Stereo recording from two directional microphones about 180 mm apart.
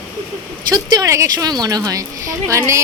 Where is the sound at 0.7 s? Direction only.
20° right (ahead or behind).